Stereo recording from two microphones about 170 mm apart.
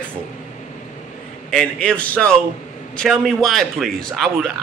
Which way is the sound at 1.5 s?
5° left (ahead or behind).